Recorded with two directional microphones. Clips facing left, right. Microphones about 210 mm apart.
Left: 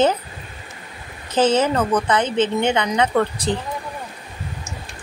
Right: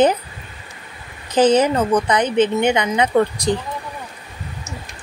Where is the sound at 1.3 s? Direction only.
15° right (ahead or behind).